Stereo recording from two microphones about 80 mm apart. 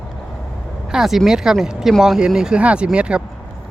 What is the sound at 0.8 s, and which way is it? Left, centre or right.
Speech, centre.